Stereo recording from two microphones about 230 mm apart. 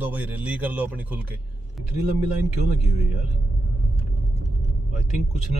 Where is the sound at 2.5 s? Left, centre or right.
Left.